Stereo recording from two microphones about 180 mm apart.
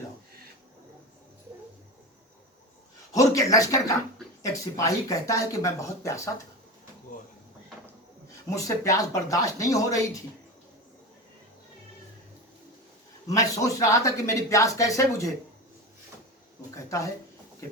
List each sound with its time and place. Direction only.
3.1 s speech: 20° left (ahead or behind)
8.4 s speech: 15° left (ahead or behind)
13.2 s speech: 20° left (ahead or behind)
16.7 s speech: 15° left (ahead or behind)